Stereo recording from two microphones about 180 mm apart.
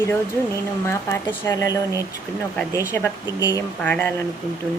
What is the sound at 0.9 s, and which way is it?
Speech, 15° left (ahead or behind).